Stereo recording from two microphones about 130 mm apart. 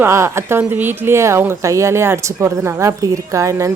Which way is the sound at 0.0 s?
20° right (ahead or behind).